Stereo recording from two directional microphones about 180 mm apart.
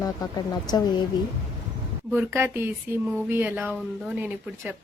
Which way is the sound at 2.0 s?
10° right (ahead or behind).